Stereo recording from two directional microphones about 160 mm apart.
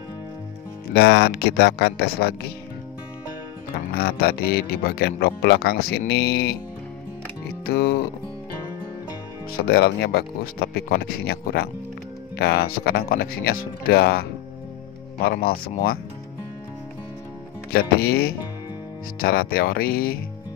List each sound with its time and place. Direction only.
0.9 s speech: 90° left
3.7 s speech: 75° left (ahead or behind)
7.6 s music: 75° left (ahead or behind)
9.5 s speech: 75° left (ahead or behind)
15.2 s speech: 70° left (ahead or behind)
17.7 s speech: 75° left (ahead or behind)